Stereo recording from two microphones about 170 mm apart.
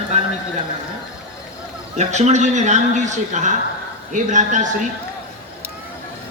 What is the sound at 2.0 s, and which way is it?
A man's voice, 45° right (ahead or behind).